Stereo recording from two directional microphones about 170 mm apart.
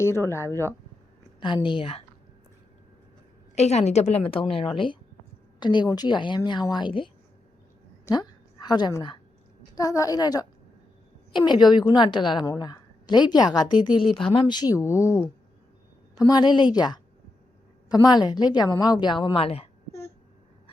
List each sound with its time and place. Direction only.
0.0 s speech: 15° left (ahead or behind)
1.4 s a woman's voice: 30° left (ahead or behind)
3.5 s a woman's voice: 40° left (ahead or behind)
8.0 s a sound: 25° left (ahead or behind)
9.7 s a woman's voice: 20° left (ahead or behind)